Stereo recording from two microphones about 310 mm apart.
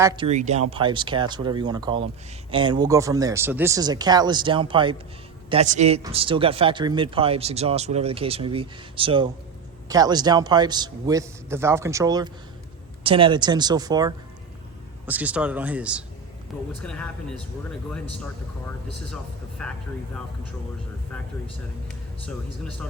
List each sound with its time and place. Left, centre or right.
0.0 s speech: centre
18.9 s speech: centre